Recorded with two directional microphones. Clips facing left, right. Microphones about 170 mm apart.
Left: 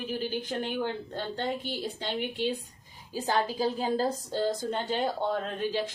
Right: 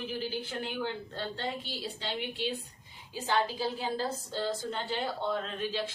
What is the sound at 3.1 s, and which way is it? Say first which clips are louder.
A woman's voice: left 2 dB; 40° left (ahead or behind).